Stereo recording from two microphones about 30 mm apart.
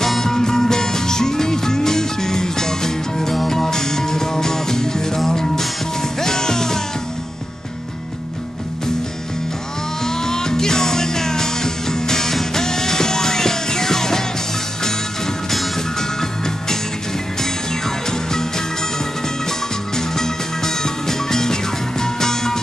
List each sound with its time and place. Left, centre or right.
0.2 s music: centre
10.0 s music: centre
16.0 s music: centre
20.0 s music: centre